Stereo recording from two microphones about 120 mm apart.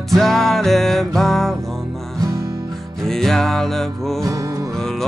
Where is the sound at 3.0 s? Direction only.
5° left (ahead or behind).